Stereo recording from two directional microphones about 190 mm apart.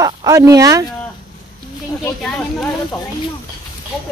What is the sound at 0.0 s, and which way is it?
Speech, 15° right (ahead or behind).